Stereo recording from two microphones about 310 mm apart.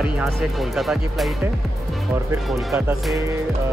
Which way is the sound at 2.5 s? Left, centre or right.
Centre.